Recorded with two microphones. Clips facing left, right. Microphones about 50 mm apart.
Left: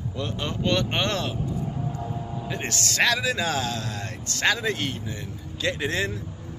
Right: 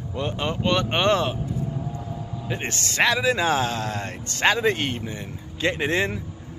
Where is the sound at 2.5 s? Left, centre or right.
Right.